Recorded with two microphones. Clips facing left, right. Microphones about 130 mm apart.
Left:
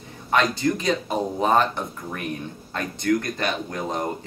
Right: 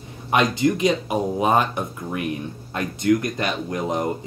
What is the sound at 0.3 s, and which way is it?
Speech, 15° right (ahead or behind).